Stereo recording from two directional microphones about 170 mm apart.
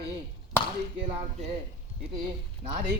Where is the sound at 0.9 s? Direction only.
40° right (ahead or behind).